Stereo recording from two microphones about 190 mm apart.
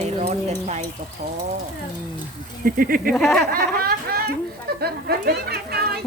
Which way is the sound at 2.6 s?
50° right (ahead or behind).